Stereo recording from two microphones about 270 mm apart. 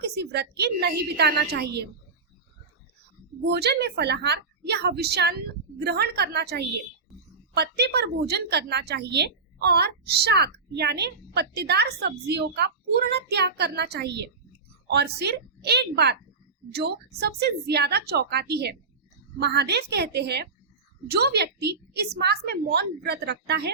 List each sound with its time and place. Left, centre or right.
0.0 s a woman's voice: right
3.4 s a woman's voice: right